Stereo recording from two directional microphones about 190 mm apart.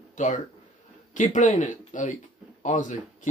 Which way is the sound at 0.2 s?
40° left (ahead or behind).